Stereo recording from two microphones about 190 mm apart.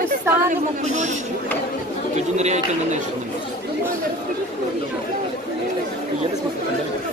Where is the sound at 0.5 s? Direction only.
40° right (ahead or behind).